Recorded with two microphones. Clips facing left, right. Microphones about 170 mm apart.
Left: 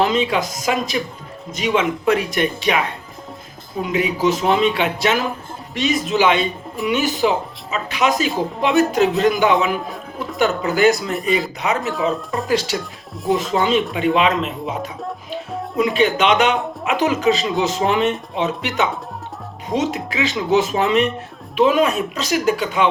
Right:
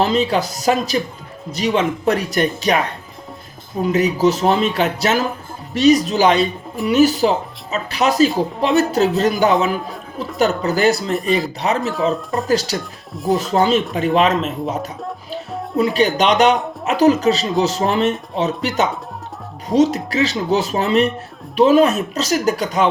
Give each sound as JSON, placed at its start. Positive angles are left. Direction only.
{"t": 0.0, "sound": "speech", "side_deg": -35}
{"t": 9.8, "sound": "speech", "side_deg": 0}
{"t": 10.3, "sound": "speech", "side_deg": -35}
{"t": 11.1, "sound": "speech", "side_deg": 0}
{"t": 12.5, "sound": "speech", "side_deg": -40}